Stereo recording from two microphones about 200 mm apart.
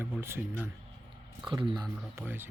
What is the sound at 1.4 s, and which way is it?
Speech, 25° right (ahead or behind).